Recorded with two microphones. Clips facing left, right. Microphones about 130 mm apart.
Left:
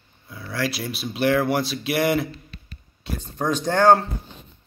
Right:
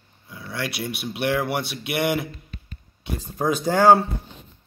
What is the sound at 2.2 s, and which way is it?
Guitar, 85° left.